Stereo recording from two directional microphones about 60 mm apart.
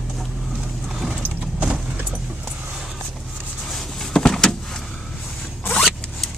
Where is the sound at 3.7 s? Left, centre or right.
Centre.